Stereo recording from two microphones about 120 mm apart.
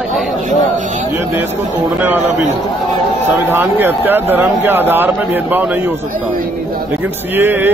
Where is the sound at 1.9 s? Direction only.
15° right (ahead or behind).